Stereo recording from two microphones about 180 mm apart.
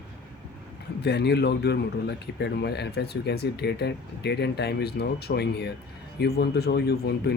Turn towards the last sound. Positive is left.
turn(degrees=65)  # may be behind; listen again after turning